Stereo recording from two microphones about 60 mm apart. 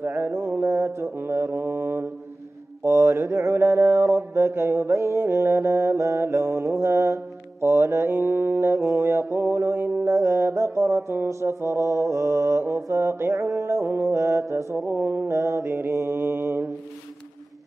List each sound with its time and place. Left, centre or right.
0.0 s mantra: right
2.8 s mantra: right
4.9 s mantra: right
13.3 s music: right
13.8 s mantra: right
14.9 s mantra: right